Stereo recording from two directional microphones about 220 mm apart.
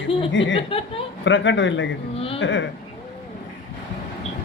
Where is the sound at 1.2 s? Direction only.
55° left (ahead or behind).